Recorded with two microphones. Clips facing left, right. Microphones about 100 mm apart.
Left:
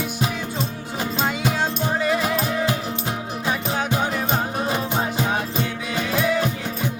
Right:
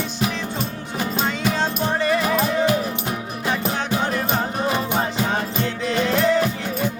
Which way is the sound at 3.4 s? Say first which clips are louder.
Right 1 dB; 20° left (ahead or behind).